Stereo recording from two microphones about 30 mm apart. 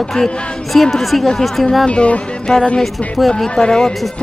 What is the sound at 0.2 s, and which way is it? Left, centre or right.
Speech, left.